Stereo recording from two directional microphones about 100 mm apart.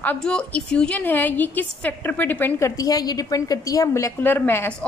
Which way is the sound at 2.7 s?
35° left (ahead or behind).